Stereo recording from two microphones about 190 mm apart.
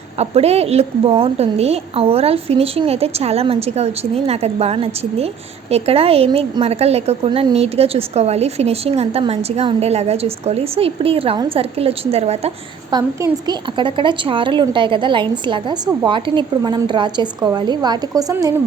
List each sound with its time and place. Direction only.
0.2 s a woman's voice: 35° right (ahead or behind)
12.9 s a woman's voice: 20° right (ahead or behind)